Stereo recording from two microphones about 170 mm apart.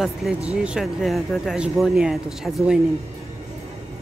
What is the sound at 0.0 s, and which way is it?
Speech, centre (ahead or behind).